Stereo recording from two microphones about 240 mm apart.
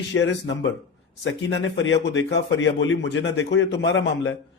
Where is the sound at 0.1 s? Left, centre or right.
Left.